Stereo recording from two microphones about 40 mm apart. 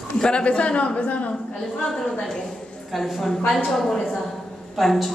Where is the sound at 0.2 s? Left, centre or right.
Left.